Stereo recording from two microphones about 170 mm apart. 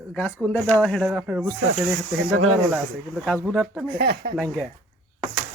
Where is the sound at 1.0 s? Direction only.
5° right (ahead or behind).